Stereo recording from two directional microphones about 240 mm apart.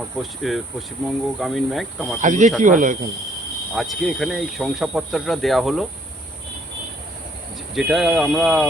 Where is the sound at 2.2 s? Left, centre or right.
Right.